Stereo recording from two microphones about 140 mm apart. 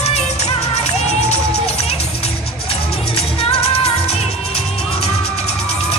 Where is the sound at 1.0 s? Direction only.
50° left (ahead or behind).